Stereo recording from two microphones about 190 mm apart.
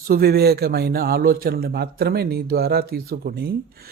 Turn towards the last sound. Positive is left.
turn(degrees=-55)  # may be behind; listen again after turning